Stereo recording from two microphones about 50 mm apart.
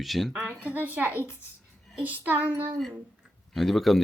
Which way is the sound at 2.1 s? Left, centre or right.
Right.